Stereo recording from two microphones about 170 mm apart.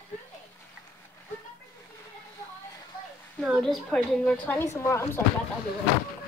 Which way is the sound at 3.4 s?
Centre (ahead or behind).